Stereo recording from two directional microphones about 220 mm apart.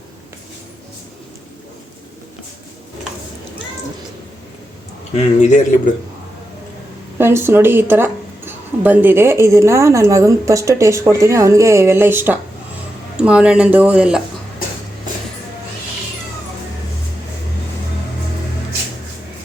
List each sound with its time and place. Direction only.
5.1 s speech: 35° left (ahead or behind)
7.2 s speech: 10° right (ahead or behind)